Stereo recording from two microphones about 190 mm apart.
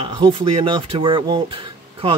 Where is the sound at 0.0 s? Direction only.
25° right (ahead or behind).